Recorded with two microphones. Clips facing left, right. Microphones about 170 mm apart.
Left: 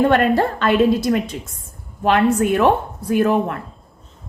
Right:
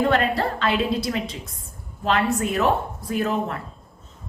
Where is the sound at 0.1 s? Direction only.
55° left (ahead or behind).